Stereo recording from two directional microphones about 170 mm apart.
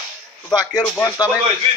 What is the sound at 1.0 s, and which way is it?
Speech, 25° left (ahead or behind).